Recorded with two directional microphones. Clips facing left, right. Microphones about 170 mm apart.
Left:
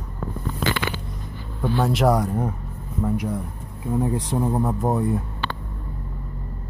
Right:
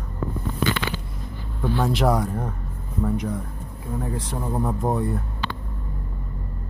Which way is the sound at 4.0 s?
20° left (ahead or behind).